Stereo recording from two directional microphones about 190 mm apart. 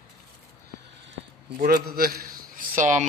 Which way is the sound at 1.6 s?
50° right (ahead or behind).